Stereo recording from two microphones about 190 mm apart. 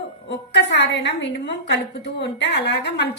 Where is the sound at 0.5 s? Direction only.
65° left (ahead or behind).